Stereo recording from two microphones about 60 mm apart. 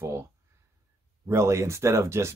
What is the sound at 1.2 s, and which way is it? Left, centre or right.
Speech, right.